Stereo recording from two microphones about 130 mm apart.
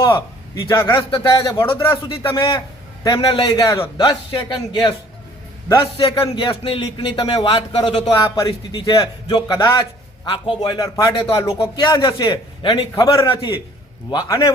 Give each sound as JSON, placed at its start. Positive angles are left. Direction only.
{"t": 0.7, "sound": "a man's voice", "side_deg": 20}
{"t": 0.9, "sound": "speech", "side_deg": 35}
{"t": 1.8, "sound": "speech", "side_deg": 40}
{"t": 11.4, "sound": "speech", "side_deg": 40}
{"t": 13.1, "sound": "speech", "side_deg": 40}
{"t": 14.1, "sound": "a man's voice", "side_deg": 30}